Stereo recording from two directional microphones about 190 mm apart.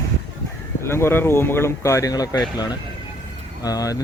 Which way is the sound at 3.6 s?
20° left (ahead or behind).